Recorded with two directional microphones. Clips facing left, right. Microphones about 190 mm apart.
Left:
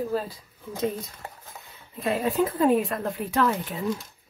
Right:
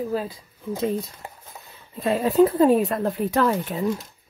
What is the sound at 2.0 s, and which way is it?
Speech, 35° right (ahead or behind).